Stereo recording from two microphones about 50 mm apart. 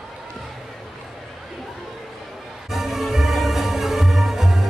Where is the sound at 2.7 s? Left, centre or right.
Centre.